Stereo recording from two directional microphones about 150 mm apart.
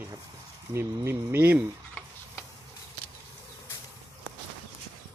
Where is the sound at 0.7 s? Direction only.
15° right (ahead or behind).